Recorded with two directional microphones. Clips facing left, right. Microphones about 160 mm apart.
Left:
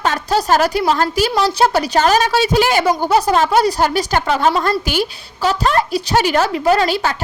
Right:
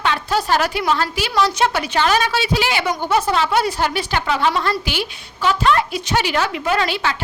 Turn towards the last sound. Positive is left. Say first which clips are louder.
# left 5 dB
turn(degrees=40)  # may be behind; listen again after turning